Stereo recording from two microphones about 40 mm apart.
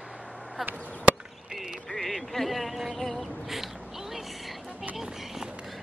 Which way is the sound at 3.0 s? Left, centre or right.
Centre.